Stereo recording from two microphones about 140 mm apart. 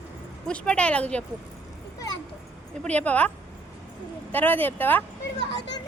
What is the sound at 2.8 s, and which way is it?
Speech, 10° left (ahead or behind).